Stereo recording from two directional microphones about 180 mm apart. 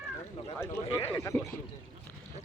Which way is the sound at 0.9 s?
15° left (ahead or behind).